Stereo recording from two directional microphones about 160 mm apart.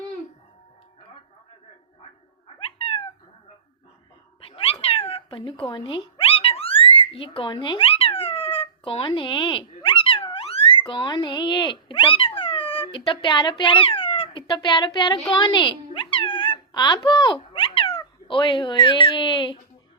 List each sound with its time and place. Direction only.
2.6 s cat: 35° left (ahead or behind)
4.4 s cat: 35° left (ahead or behind)
13.4 s speech: 30° left (ahead or behind)